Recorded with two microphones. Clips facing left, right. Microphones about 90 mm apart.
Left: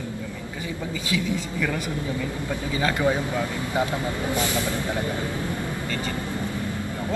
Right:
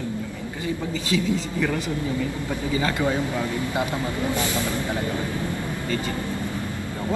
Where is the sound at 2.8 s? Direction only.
15° left (ahead or behind).